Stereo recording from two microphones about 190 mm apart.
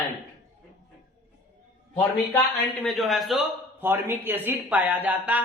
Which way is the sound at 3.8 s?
10° right (ahead or behind).